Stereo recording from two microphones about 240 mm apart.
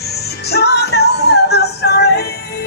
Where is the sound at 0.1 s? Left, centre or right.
Left.